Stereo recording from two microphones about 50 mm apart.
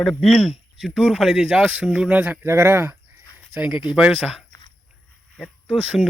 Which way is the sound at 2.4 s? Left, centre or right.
Right.